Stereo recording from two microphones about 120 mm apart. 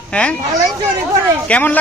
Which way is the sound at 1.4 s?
10° left (ahead or behind).